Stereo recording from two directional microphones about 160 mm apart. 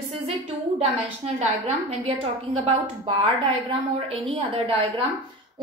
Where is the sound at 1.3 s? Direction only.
40° right (ahead or behind).